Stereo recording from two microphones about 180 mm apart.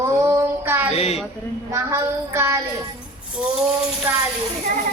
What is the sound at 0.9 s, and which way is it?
Speech, 35° left (ahead or behind).